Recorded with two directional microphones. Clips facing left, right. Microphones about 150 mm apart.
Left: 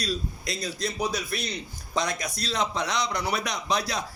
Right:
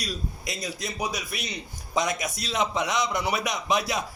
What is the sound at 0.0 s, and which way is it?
A man's voice, 15° right (ahead or behind).